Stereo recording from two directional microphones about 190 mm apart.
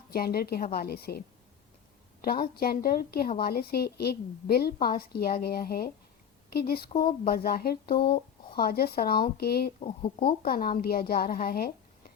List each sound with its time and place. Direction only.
0.1 s a woman's voice: 50° left (ahead or behind)
2.2 s a woman's voice: 50° left (ahead or behind)
9.8 s speech: 30° left (ahead or behind)
10.2 s a woman's voice: 50° left (ahead or behind)